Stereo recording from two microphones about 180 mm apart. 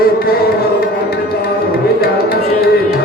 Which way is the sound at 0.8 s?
60° left (ahead or behind).